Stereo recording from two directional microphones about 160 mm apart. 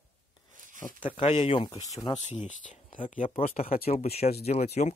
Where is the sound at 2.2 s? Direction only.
50° left (ahead or behind).